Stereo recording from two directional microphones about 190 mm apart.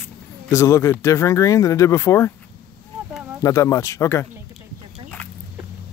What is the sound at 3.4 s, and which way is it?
Speech, 15° left (ahead or behind).